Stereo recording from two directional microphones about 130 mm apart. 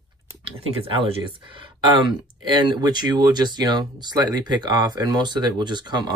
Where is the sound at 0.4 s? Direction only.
40° right (ahead or behind).